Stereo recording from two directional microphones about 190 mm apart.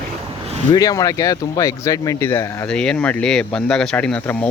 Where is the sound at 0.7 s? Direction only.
20° left (ahead or behind).